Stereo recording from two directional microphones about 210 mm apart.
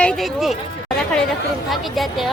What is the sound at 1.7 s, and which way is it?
Speech, centre (ahead or behind).